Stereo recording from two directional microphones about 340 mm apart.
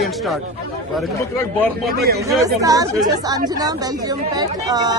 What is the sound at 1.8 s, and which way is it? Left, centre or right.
Speech, right.